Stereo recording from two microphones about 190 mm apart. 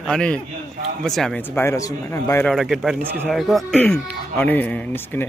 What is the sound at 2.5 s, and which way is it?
Speech, centre (ahead or behind).